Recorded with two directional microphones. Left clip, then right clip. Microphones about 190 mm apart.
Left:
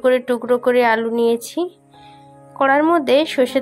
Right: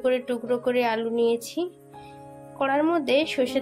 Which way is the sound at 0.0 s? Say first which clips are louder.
Left 8 dB; 20° left (ahead or behind).